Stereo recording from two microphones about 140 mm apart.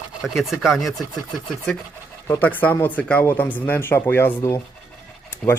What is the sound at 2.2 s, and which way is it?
Speech, 15° left (ahead or behind).